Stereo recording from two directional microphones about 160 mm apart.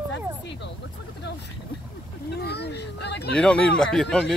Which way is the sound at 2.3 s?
90° left.